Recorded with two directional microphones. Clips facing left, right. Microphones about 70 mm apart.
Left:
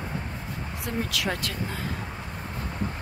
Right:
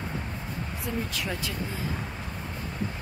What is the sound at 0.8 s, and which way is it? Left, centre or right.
Speech, left.